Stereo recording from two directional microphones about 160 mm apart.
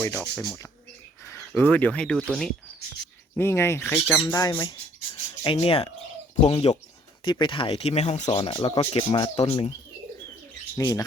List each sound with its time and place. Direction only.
0.0 s speech: 15° left (ahead or behind)
1.5 s speech: 10° left (ahead or behind)
3.3 s speech: 15° left (ahead or behind)
4.6 s a sound: 25° left (ahead or behind)
5.5 s speech: 40° left (ahead or behind)
10.8 s speech: 20° left (ahead or behind)